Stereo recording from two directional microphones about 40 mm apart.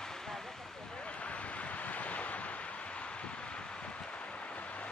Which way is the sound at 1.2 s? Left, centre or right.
Left.